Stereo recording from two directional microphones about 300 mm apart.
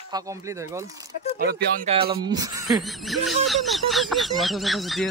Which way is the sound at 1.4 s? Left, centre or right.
Right.